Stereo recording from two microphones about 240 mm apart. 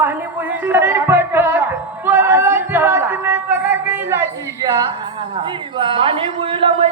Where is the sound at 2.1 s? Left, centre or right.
Centre.